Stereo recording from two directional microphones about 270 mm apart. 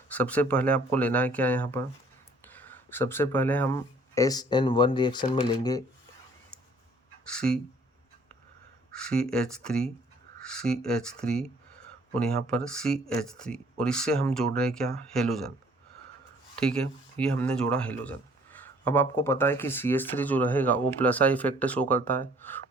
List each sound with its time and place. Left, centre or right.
0.1 s speech: centre
7.3 s speech: centre
8.9 s speech: centre
16.6 s speech: centre